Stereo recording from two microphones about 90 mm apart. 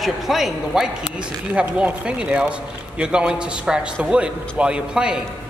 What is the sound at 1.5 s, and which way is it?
A man's voice, 15° right (ahead or behind).